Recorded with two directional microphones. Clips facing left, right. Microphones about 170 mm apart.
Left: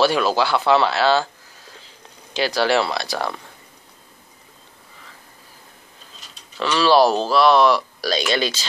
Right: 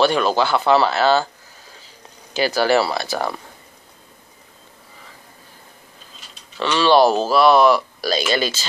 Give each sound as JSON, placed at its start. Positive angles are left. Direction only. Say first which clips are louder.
{"t": 0.0, "sound": "speech", "louder": "right 1 dB", "side_deg": 5}
{"t": 2.3, "sound": "speech", "louder": "right 2 dB", "side_deg": -5}
{"t": 6.6, "sound": "speech", "louder": "right 1 dB", "side_deg": 0}